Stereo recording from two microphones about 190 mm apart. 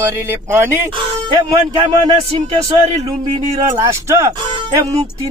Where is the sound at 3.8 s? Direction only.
15° right (ahead or behind).